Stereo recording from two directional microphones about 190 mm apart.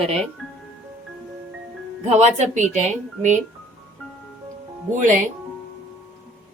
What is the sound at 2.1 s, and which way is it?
Speech, 35° right (ahead or behind).